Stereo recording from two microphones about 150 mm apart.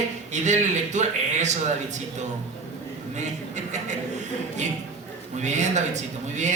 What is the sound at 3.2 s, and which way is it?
Speech, 50° right (ahead or behind).